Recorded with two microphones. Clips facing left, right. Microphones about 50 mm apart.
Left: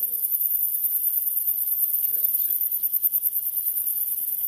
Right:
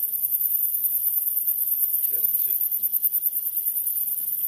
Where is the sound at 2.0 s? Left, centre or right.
Right.